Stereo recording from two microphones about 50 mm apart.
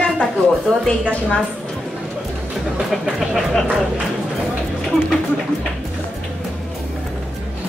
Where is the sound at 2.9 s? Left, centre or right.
Centre.